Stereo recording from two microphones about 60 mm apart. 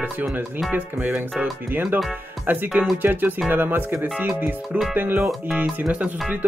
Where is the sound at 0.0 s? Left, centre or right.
Right.